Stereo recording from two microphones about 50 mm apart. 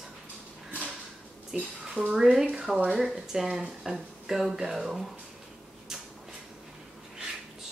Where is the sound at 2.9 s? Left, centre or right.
Centre.